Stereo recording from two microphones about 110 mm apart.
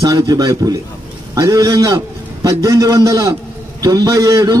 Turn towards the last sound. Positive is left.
turn(degrees=-35)  # may be behind; listen again after turning